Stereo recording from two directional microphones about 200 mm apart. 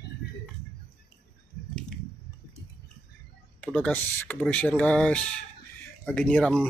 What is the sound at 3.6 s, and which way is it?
Speech, 5° left (ahead or behind).